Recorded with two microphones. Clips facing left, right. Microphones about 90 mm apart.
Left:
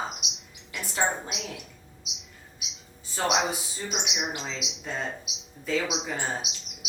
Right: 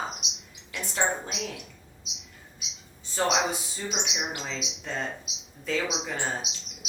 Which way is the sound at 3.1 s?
5° left (ahead or behind).